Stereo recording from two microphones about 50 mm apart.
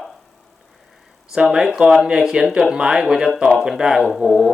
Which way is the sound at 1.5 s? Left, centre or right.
Centre.